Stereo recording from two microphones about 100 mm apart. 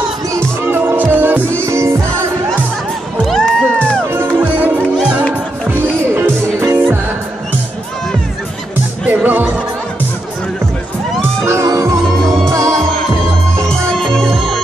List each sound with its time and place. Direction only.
0.7 s music: 20° right (ahead or behind)
3.3 s music: 5° left (ahead or behind)
4.4 s music: 20° right (ahead or behind)
9.0 s music: 15° right (ahead or behind)
11.1 s music: 30° right (ahead or behind)
13.7 s music: 5° left (ahead or behind)